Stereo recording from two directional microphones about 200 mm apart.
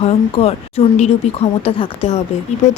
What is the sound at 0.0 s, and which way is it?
Speech, 30° left (ahead or behind).